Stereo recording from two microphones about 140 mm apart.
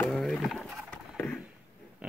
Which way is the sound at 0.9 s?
10° left (ahead or behind).